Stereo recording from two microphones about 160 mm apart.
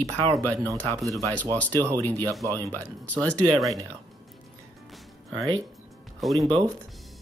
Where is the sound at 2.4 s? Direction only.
20° right (ahead or behind).